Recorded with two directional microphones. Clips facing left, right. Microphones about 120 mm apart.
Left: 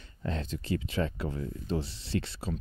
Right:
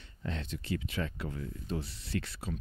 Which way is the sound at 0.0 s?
40° left (ahead or behind).